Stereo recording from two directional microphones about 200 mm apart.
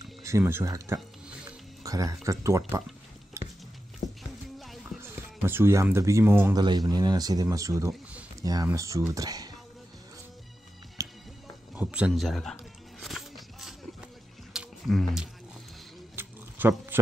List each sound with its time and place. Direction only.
0.2 s speech: 15° right (ahead or behind)
1.8 s music: 15° right (ahead or behind)
2.2 s speech: 15° right (ahead or behind)
3.4 s music: 15° right (ahead or behind)
4.0 s music: 35° left (ahead or behind)
4.6 s music: centre (ahead or behind)
4.9 s speech: 10° right (ahead or behind)
11.0 s music: 15° right (ahead or behind)
11.7 s speech: 5° right (ahead or behind)
13.0 s a sound: centre (ahead or behind)
14.5 s roaring cats: centre (ahead or behind)
16.2 s a sound: 10° right (ahead or behind)